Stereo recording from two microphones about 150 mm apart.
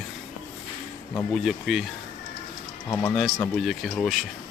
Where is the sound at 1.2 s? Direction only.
Centre (ahead or behind).